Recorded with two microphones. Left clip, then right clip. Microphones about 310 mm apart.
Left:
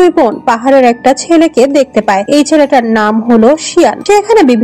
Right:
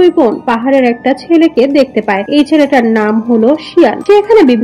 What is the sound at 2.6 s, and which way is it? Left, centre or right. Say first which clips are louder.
Speech: left 1 dB; left.